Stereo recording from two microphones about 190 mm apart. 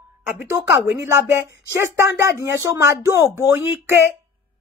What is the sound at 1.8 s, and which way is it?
Speech, 15° right (ahead or behind).